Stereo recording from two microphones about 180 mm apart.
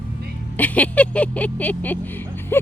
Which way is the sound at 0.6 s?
10° left (ahead or behind).